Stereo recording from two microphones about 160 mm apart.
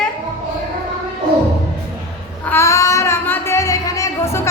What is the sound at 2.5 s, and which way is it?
Child singing, 15° left (ahead or behind).